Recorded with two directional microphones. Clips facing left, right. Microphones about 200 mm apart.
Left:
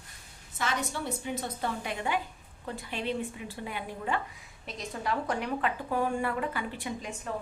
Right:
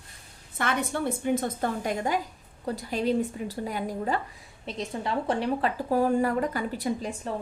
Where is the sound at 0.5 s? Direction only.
55° right (ahead or behind); by 4.2 s 40° right (ahead or behind).